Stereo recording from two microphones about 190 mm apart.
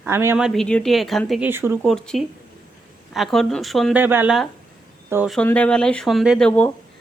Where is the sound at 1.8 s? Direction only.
Centre (ahead or behind).